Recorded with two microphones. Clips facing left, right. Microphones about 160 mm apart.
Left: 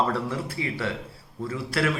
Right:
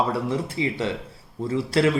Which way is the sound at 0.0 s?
15° right (ahead or behind).